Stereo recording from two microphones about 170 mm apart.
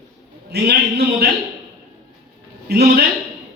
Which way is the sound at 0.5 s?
70° right (ahead or behind).